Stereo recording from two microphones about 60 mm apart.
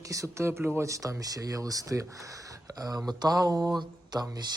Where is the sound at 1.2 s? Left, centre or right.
Right.